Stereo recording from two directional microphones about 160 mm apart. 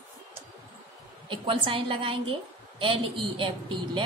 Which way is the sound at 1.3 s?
30° right (ahead or behind).